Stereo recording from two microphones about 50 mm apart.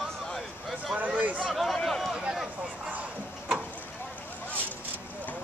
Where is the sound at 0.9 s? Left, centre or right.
Right.